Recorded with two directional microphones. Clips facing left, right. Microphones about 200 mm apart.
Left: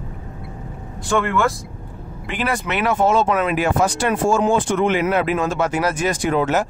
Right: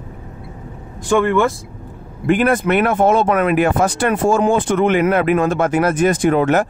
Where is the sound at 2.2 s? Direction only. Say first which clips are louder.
Right 9 dB; 50° right (ahead or behind).